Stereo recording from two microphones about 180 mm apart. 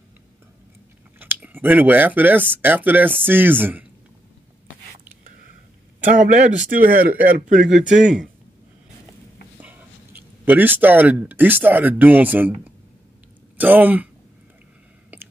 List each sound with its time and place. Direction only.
1.2 s speech: 10° right (ahead or behind)
6.0 s a man's voice: 45° right (ahead or behind)
7.9 s speech: 5° right (ahead or behind)
9.6 s speech: 10° right (ahead or behind)